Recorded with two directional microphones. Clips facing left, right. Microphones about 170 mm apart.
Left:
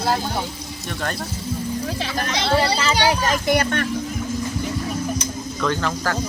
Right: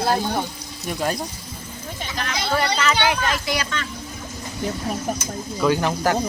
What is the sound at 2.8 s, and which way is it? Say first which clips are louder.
Speech: left 1 dB; 30° left (ahead or behind).